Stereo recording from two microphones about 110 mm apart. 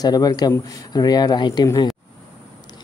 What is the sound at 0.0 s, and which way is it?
Speech, 35° left (ahead or behind).